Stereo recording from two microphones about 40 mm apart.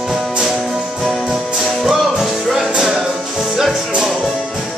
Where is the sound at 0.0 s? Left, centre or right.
Centre.